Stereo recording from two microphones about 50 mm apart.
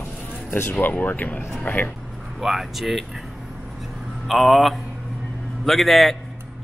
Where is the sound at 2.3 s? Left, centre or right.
Centre.